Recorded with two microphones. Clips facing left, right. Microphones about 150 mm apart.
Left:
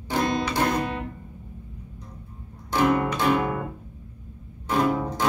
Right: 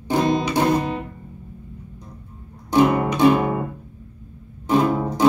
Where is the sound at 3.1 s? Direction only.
15° right (ahead or behind).